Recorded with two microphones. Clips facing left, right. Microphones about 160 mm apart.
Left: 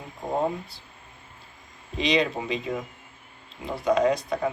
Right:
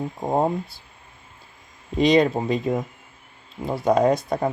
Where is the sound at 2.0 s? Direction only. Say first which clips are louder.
Right 7 dB; 45° right (ahead or behind).